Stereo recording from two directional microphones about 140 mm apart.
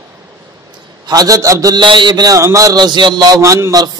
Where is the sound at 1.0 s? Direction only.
25° right (ahead or behind).